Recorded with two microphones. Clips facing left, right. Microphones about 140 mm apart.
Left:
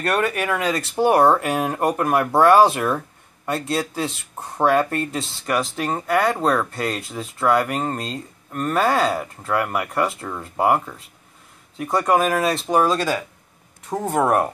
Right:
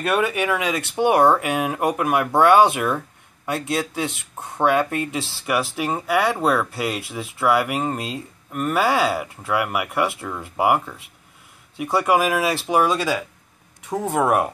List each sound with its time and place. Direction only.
0.0 s speech: 5° right (ahead or behind)